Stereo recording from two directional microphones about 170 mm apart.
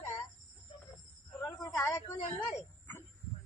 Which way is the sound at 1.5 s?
20° left (ahead or behind).